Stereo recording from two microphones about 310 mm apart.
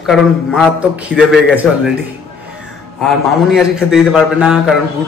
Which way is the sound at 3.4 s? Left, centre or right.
Centre.